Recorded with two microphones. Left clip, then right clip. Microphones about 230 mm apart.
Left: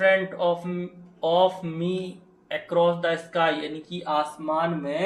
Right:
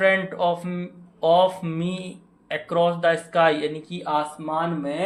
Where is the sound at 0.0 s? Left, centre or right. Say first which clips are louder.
Right 1 dB; right.